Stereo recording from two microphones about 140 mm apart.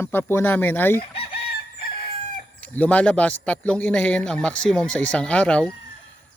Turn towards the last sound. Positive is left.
turn(degrees=10)  # may be behind; listen again after turning